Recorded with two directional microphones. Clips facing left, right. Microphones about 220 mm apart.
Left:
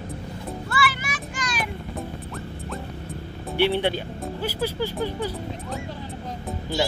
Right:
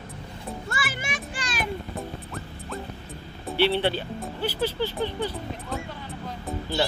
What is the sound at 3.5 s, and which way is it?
Speech, 15° left (ahead or behind).